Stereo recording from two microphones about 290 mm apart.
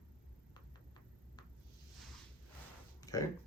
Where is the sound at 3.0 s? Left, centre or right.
Centre.